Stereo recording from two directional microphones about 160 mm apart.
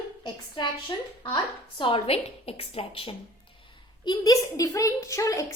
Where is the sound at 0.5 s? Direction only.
25° left (ahead or behind).